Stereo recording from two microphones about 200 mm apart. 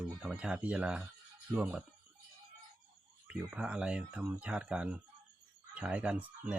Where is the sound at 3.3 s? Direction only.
5° right (ahead or behind).